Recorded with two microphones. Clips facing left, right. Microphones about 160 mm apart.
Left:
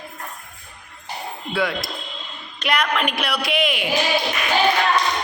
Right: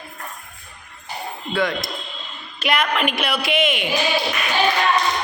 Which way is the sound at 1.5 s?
10° left (ahead or behind).